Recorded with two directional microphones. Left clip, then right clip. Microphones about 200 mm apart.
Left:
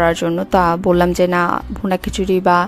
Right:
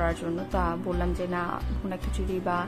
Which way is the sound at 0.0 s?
50° left (ahead or behind).